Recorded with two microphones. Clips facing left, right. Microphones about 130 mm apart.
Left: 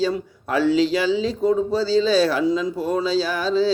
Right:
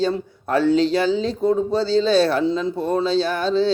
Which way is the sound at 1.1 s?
5° left (ahead or behind).